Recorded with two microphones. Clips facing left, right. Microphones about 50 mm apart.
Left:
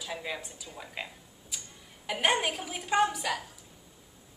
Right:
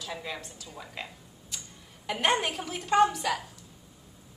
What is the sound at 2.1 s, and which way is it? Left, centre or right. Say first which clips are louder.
A woman's voice: right 1 dB; centre.